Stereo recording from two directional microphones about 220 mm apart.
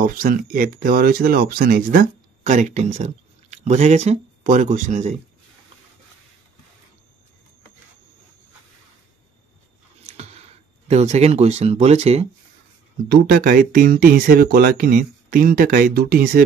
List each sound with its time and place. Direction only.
0.0 s speech: 40° right (ahead or behind)
10.0 s a sound: 30° right (ahead or behind)
10.9 s speech: 30° right (ahead or behind)
13.1 s speech: 45° right (ahead or behind)